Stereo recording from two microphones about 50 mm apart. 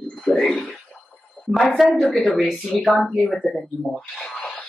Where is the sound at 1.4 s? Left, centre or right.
Left.